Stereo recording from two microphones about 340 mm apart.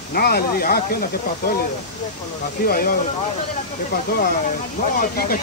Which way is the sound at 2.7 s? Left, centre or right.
Left.